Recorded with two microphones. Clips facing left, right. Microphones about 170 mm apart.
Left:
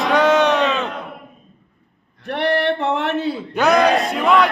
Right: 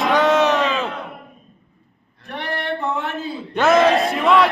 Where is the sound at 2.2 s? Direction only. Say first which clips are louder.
Left 8 dB; 75° left (ahead or behind).